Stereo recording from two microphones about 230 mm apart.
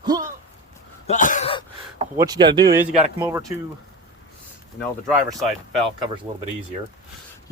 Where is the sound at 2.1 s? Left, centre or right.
Centre.